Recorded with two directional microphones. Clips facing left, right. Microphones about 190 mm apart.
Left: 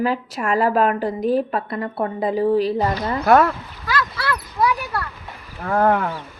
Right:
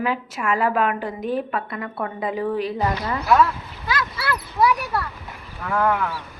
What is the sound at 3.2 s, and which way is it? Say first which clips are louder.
Speech: left 3 dB; 55° left (ahead or behind).